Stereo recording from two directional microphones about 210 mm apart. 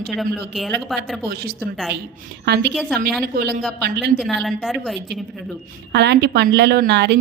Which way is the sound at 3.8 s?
50° right (ahead or behind).